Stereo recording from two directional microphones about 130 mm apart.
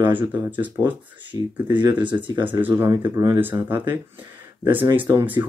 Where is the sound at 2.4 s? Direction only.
15° right (ahead or behind).